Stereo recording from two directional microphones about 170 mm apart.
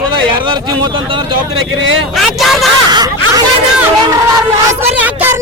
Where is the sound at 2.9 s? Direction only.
25° right (ahead or behind).